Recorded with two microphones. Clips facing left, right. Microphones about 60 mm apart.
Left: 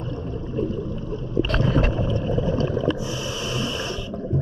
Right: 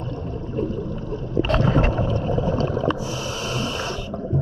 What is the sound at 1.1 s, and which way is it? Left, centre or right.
Boat, right.